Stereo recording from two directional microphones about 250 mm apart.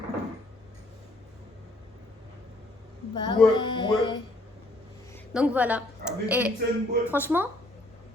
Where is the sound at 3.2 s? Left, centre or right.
Centre.